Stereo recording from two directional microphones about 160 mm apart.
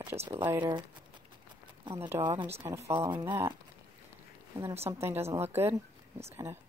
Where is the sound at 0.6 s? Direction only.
25° right (ahead or behind).